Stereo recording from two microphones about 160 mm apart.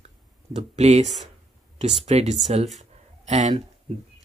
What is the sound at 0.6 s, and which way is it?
Speech, 45° right (ahead or behind).